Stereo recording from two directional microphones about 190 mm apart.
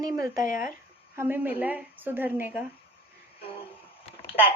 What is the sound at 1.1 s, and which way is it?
A woman's voice, 10° right (ahead or behind).